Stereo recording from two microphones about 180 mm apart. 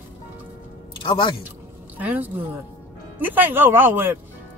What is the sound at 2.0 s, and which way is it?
Speech, 10° right (ahead or behind).